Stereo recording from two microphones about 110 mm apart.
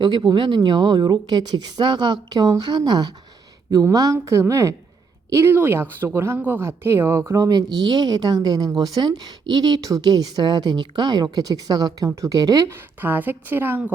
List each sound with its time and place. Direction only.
0.2 s a woman's voice: 40° right (ahead or behind)
13.0 s a woman's voice: 15° right (ahead or behind)